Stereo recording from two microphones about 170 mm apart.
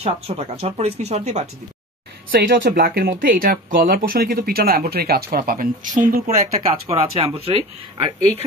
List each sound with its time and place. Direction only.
0.0 s speech: 35° right (ahead or behind)
2.3 s speech: 85° right; by 6.2 s 55° right (ahead or behind)
6.2 s speech: 40° right (ahead or behind)